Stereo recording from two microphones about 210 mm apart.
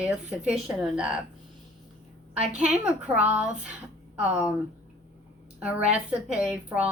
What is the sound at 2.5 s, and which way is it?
A woman's voice, 5° right (ahead or behind).